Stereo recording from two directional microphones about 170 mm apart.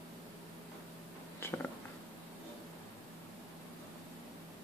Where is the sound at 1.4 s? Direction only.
15° left (ahead or behind).